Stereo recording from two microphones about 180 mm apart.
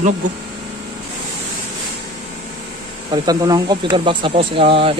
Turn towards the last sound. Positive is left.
turn(degrees=-30)  # may be behind; listen again after turning